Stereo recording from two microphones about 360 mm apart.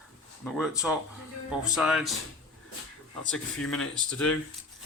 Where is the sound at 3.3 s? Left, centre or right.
Centre.